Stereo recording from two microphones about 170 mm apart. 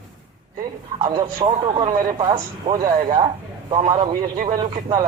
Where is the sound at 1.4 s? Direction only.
35° right (ahead or behind).